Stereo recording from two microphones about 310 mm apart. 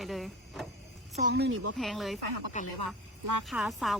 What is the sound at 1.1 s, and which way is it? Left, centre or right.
Speech, right.